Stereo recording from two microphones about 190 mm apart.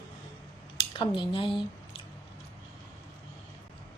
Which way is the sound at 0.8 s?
25° left (ahead or behind).